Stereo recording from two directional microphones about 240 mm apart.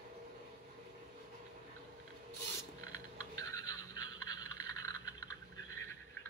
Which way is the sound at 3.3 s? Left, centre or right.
Centre.